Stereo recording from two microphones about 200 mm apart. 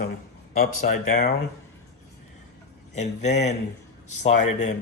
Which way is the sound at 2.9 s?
35° left (ahead or behind).